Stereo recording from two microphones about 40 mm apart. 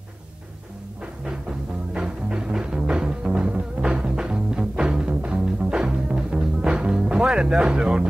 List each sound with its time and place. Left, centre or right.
1.2 s music: right